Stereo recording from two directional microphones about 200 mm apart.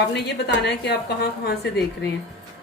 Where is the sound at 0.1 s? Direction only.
55° left (ahead or behind).